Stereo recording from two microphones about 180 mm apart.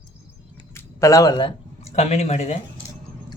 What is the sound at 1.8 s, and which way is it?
Speech, 35° left (ahead or behind).